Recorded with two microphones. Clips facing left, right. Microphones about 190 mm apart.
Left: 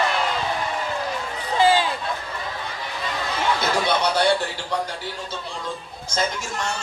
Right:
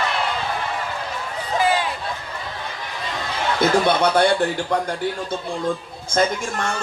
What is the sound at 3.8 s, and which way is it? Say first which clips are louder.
Speech: right 3 dB; 55° right (ahead or behind).